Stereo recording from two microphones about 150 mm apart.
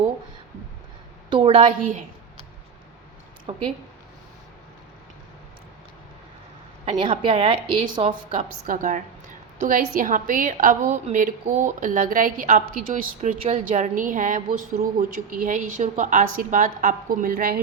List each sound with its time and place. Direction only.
1.3 s a woman's voice: 35° right (ahead or behind)
3.5 s a woman's voice: 35° right (ahead or behind)
6.8 s a woman's voice: 35° right (ahead or behind)
8.4 s a woman's voice: 65° right (ahead or behind)